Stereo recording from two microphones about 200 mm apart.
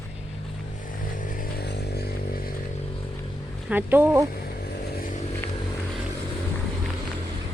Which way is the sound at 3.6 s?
10° right (ahead or behind).